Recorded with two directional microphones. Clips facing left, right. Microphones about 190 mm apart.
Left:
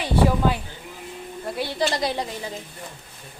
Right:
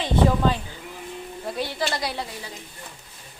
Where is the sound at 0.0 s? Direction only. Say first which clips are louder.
Even; 10° left (ahead or behind).